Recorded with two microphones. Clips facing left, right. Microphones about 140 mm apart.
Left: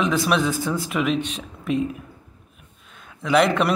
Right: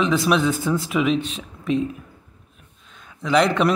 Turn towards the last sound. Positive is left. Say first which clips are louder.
# even
turn(degrees=0)  # may be behind; listen again after turning